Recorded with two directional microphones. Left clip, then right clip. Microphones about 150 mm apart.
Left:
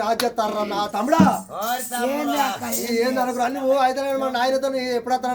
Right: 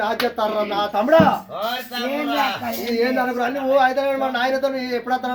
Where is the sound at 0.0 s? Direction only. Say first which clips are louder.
Right 1 dB; 35° left (ahead or behind).